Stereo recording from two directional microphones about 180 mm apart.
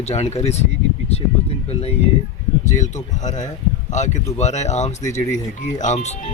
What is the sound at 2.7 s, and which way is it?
Speech, 40° left (ahead or behind).